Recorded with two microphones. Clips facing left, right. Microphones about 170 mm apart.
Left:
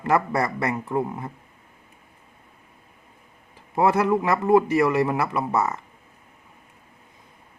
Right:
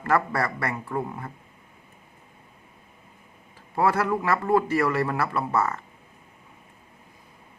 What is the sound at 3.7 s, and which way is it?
A man's voice, 20° left (ahead or behind).